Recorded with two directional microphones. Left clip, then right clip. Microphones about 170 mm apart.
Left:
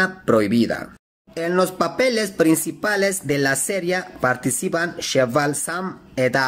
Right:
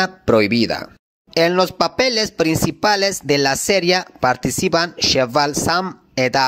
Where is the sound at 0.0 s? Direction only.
35° right (ahead or behind).